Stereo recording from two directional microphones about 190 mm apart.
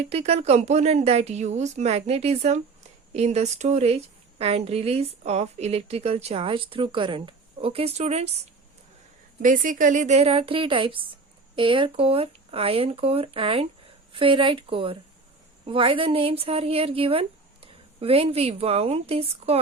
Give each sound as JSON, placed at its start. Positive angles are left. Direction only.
{"t": 0.0, "sound": "a woman's voice", "side_deg": -35}
{"t": 9.4, "sound": "a woman's voice", "side_deg": -45}